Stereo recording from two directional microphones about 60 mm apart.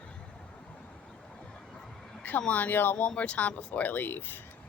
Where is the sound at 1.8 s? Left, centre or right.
Centre.